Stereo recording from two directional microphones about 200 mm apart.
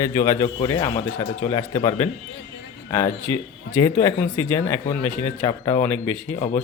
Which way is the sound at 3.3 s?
15° left (ahead or behind).